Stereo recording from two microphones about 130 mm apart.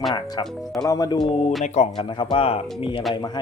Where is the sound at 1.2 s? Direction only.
50° left (ahead or behind).